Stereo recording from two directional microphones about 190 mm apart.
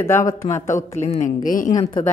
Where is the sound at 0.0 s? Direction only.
15° left (ahead or behind).